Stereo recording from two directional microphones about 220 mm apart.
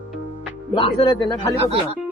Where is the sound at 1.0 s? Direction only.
20° left (ahead or behind).